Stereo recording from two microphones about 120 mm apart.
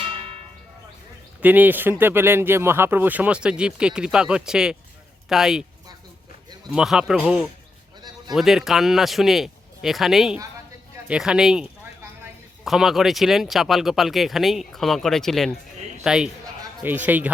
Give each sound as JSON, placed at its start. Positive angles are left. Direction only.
{"t": 0.0, "sound": "church bell", "side_deg": -50}
{"t": 1.4, "sound": "speech", "side_deg": -15}
{"t": 6.7, "sound": "speech", "side_deg": -5}